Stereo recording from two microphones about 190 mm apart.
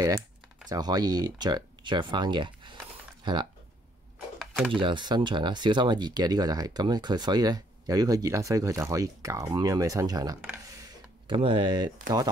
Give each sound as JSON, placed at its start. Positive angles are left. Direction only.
{"t": 0.7, "sound": "speech", "side_deg": -20}
{"t": 4.4, "sound": "a sound", "side_deg": 0}
{"t": 4.7, "sound": "speech", "side_deg": -25}